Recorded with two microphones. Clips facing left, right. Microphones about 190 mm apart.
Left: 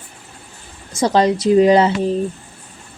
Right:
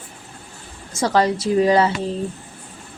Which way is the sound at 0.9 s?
20° left (ahead or behind).